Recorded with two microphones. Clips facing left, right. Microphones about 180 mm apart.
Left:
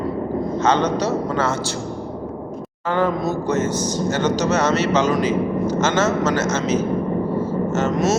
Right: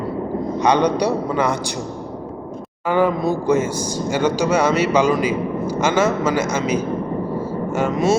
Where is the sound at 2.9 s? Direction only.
10° right (ahead or behind).